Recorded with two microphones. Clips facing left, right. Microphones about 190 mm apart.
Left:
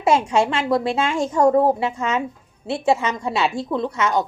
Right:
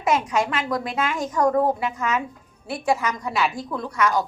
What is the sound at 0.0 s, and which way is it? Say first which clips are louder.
A woman's voice: left 4 dB; 30° left (ahead or behind).